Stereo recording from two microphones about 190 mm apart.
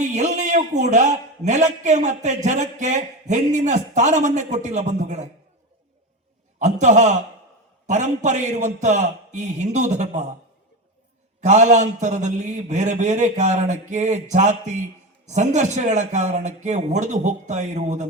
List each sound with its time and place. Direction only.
0.1 s a man's voice: 40° right (ahead or behind)
6.6 s a man's voice: 40° right (ahead or behind)
11.3 s a man's voice: 40° right (ahead or behind)